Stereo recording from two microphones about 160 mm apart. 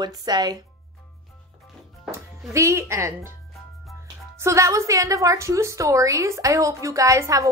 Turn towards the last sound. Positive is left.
turn(degrees=-20)  # may be behind; listen again after turning